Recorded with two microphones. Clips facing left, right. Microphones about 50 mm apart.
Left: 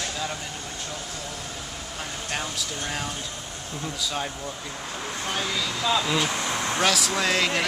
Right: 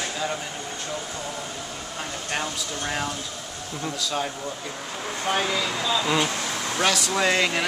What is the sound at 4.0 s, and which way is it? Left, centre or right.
Speech, centre.